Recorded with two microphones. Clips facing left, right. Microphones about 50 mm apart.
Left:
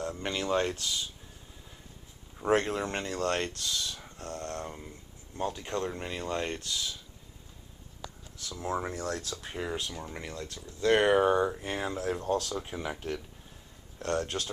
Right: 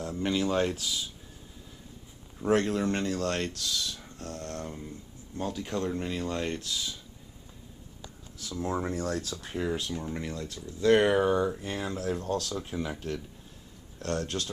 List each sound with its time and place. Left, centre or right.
0.2 s speech: centre
2.5 s speech: centre
5.5 s speech: centre
8.4 s speech: centre
11.2 s speech: left